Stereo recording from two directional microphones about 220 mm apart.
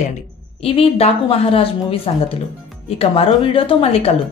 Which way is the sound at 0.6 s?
25° left (ahead or behind).